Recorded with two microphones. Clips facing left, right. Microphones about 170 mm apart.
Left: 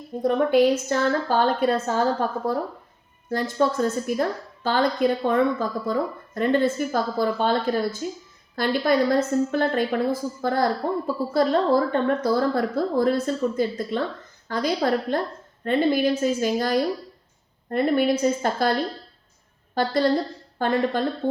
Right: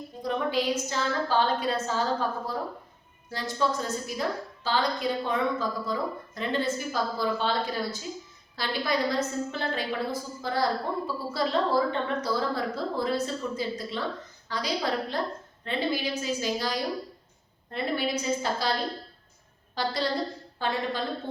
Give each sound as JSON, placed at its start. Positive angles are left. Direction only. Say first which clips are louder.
{"t": 0.2, "sound": "a woman's voice", "louder": "left 10 dB", "side_deg": 55}
{"t": 3.2, "sound": "a woman's voice", "louder": "left 6 dB", "side_deg": 55}
{"t": 19.7, "sound": "a woman's voice", "louder": "left 8 dB", "side_deg": 50}